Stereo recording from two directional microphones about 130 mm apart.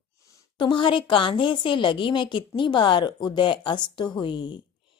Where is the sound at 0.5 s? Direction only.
40° left (ahead or behind).